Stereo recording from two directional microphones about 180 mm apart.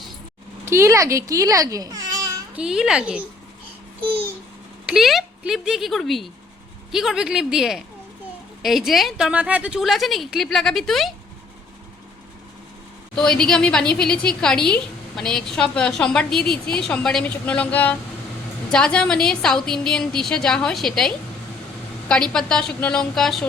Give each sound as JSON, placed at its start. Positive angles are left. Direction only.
{"t": 0.6, "sound": "speech", "side_deg": -15}
{"t": 2.6, "sound": "a woman's voice", "side_deg": -5}
{"t": 4.9, "sound": "a woman's voice", "side_deg": 0}
{"t": 13.1, "sound": "a woman's voice", "side_deg": 5}
{"t": 22.1, "sound": "a woman's voice", "side_deg": 5}